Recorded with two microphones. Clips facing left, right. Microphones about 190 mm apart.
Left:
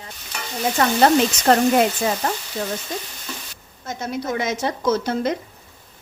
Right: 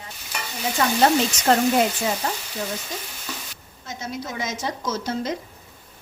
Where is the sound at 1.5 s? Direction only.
60° left (ahead or behind).